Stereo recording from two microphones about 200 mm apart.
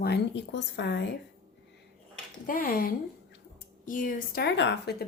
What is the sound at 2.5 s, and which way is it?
A woman's voice, 45° left (ahead or behind).